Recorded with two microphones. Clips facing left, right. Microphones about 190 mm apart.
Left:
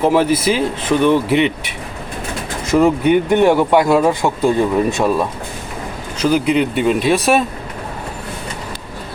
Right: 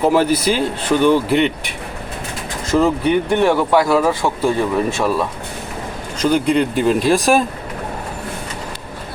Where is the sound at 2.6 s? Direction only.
15° left (ahead or behind).